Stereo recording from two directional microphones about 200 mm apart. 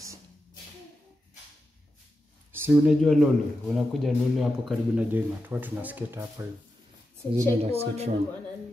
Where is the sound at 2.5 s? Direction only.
10° right (ahead or behind).